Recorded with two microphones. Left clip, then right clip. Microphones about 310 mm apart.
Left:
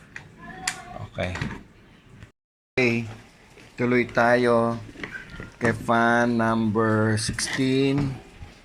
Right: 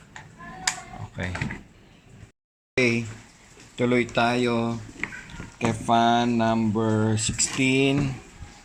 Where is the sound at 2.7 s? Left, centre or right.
Centre.